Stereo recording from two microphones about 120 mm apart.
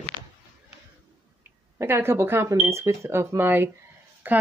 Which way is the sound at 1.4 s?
20° right (ahead or behind).